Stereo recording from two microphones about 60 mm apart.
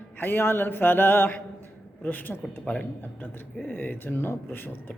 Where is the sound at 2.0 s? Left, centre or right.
Left.